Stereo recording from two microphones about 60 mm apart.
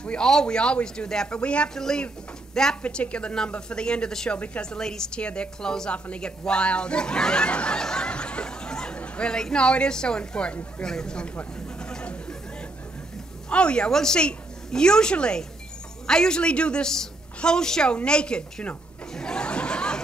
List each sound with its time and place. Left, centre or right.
0.0 s a woman's voice: centre
11.3 s chatter: centre
13.5 s a woman's voice: centre
17.9 s chuckle: centre